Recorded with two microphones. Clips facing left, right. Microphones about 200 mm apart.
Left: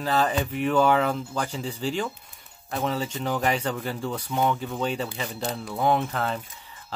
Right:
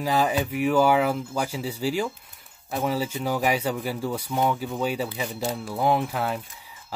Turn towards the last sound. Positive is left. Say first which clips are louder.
# even
turn(degrees=-10)  # may be behind; listen again after turning